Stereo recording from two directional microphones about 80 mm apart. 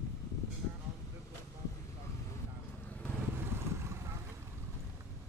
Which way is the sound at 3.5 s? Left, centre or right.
Right.